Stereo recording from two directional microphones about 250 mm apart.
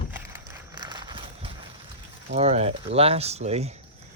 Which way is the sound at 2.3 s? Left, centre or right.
Right.